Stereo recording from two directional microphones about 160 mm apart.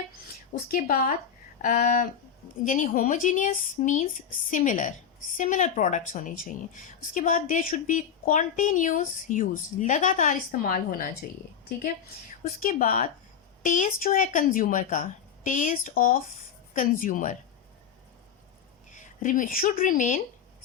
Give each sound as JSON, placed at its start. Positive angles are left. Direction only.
{"t": 0.7, "sound": "a woman's voice", "side_deg": 60}
{"t": 12.6, "sound": "a woman's voice", "side_deg": 60}
{"t": 18.9, "sound": "speech", "side_deg": 50}